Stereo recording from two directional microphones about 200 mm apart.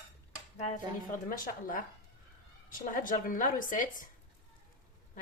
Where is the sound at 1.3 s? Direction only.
45° left (ahead or behind).